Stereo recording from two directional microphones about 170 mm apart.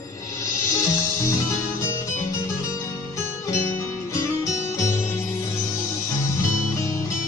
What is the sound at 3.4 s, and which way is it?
Music, 15° left (ahead or behind).